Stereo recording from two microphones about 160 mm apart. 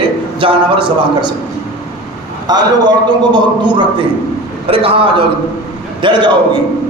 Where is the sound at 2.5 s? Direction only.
25° right (ahead or behind).